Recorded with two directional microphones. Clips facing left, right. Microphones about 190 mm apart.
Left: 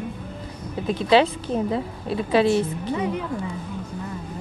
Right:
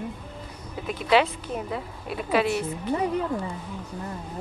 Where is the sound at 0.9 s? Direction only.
30° left (ahead or behind).